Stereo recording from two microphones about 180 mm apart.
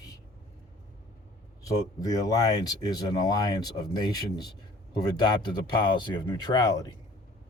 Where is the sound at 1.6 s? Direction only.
20° left (ahead or behind).